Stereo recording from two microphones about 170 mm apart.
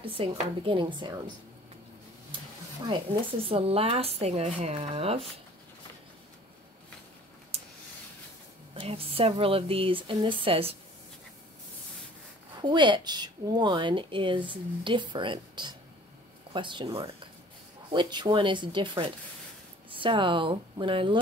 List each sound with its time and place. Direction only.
0.2 s speech: 30° right (ahead or behind)
2.9 s speech: 30° right (ahead or behind)
7.5 s a sound: 40° right (ahead or behind)
8.7 s speech: 35° right (ahead or behind)
12.6 s speech: 25° right (ahead or behind)